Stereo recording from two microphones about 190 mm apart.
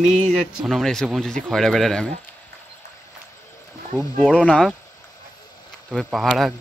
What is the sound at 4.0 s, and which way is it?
Speech, centre (ahead or behind).